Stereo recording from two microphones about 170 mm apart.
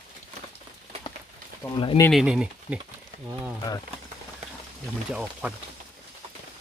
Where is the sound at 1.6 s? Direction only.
20° left (ahead or behind).